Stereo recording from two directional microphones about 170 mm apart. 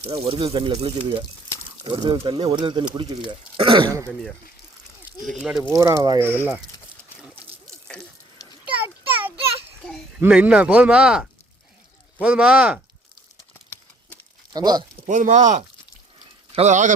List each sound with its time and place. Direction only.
0.0 s speech: 30° right (ahead or behind)
5.2 s speech: centre (ahead or behind)
5.7 s speech: 20° right (ahead or behind)
8.6 s a sound: 10° right (ahead or behind)
10.2 s speech: 10° right (ahead or behind)
14.5 s speech: 25° right (ahead or behind)
15.0 s speech: 45° right (ahead or behind)